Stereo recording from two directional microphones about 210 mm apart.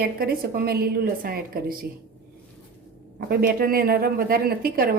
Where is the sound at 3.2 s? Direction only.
45° right (ahead or behind).